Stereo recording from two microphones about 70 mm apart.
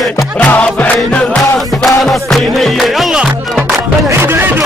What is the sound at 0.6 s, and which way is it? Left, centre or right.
Music, centre.